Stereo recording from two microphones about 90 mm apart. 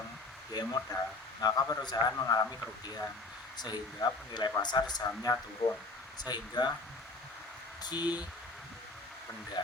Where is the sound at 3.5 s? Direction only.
50° left (ahead or behind).